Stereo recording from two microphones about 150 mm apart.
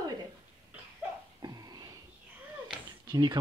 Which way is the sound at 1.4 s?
25° right (ahead or behind).